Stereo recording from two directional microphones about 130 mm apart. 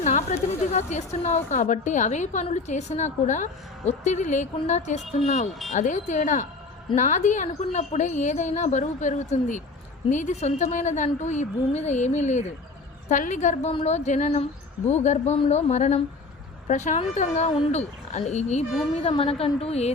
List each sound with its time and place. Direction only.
0.0 s a woman's voice: 70° left (ahead or behind)
1.5 s a woman's voice: 70° left (ahead or behind)
13.1 s a woman's voice: 80° left
13.7 s a woman's voice: 55° left (ahead or behind)
18.9 s a woman's voice: 50° left (ahead or behind)